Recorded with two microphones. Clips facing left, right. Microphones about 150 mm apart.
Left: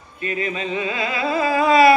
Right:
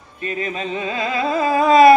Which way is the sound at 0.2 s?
35° right (ahead or behind).